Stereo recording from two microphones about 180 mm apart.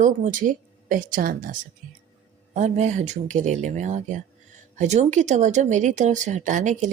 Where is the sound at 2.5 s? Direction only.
40° right (ahead or behind).